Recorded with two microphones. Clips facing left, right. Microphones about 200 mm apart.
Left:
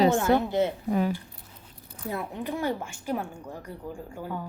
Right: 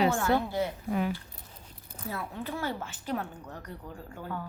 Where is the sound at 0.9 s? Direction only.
35° left (ahead or behind).